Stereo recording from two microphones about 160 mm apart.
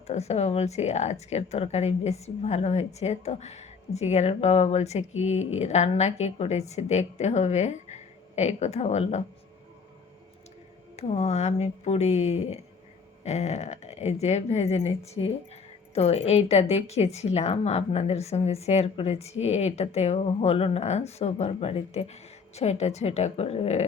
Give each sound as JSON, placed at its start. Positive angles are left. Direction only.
{"t": 0.1, "sound": "speech", "side_deg": 40}
{"t": 10.9, "sound": "a woman's voice", "side_deg": 40}